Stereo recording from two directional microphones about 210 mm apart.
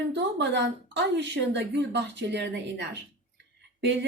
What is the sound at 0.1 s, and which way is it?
Speech, 55° right (ahead or behind).